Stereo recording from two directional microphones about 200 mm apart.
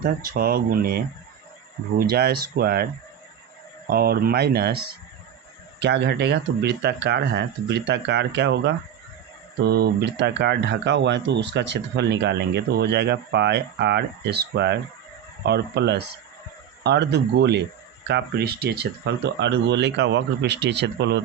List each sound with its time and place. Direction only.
0.0 s speech: 50° right (ahead or behind)
3.8 s speech: 50° right (ahead or behind)